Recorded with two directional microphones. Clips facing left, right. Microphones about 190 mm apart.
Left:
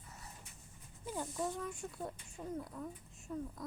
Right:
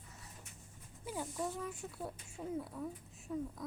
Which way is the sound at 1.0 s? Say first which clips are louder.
Left 1 dB; 5° right (ahead or behind).